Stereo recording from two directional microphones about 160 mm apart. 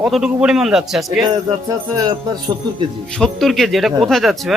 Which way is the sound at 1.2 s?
25° right (ahead or behind).